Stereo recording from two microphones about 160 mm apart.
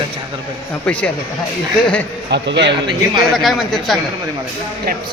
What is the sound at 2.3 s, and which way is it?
Speech, 90° right.